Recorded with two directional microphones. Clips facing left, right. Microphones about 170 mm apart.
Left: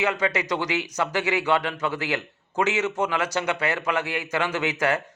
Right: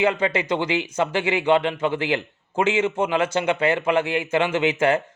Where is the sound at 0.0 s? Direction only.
30° right (ahead or behind).